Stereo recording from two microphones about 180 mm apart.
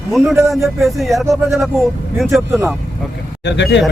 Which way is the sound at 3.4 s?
75° left (ahead or behind).